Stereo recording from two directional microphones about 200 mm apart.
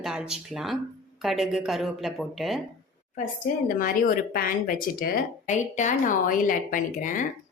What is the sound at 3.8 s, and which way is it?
A woman's voice, 45° left (ahead or behind).